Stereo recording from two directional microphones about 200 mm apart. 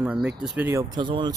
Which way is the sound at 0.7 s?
20° right (ahead or behind).